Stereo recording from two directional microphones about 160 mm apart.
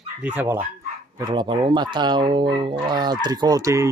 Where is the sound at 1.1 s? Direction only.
25° right (ahead or behind).